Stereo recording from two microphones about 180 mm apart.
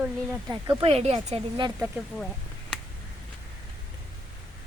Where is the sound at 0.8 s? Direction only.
35° right (ahead or behind).